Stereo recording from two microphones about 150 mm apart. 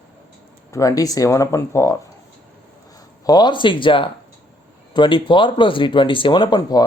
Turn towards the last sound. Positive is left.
turn(degrees=30)  # may be behind; listen again after turning